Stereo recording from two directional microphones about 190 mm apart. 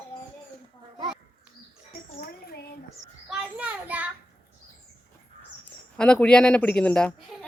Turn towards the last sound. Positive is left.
turn(degrees=5)  # may be behind; listen again after turning